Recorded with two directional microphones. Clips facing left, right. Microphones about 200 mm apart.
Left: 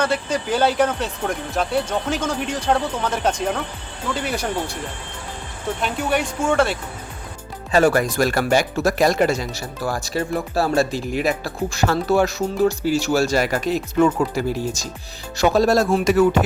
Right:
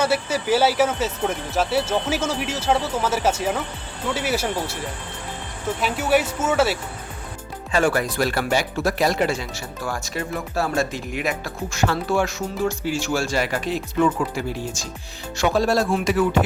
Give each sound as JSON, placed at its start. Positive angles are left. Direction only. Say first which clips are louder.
{"t": 0.0, "sound": "speech", "louder": "even", "side_deg": -5}
{"t": 5.8, "sound": "speech", "louder": "right 2 dB", "side_deg": -5}
{"t": 7.7, "sound": "speech", "louder": "left 4 dB", "side_deg": 40}